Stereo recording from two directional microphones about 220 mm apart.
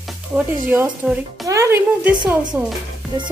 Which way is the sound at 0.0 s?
5° right (ahead or behind).